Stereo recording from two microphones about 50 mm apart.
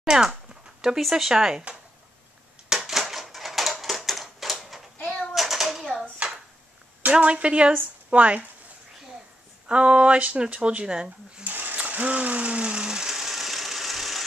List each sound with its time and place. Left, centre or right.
0.0 s speech: centre
2.7 s typewriter: centre
5.0 s a sound: centre
7.1 s speech: right
9.7 s speech: right
11.4 s ratchet: right; by 14.2 s centre